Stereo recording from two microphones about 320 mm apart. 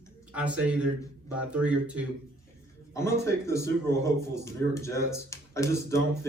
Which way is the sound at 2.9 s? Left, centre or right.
Centre.